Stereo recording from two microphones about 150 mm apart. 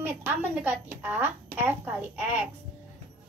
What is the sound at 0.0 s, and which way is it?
A woman's voice, 15° right (ahead or behind).